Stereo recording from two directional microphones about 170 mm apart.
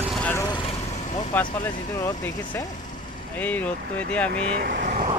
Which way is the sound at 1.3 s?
10° left (ahead or behind).